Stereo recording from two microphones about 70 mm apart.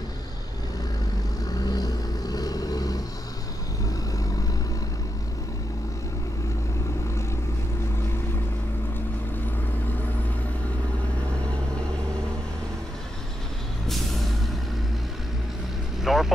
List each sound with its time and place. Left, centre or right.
1.7 s vehicle: left
13.8 s vehicle: centre
16.0 s vehicle: centre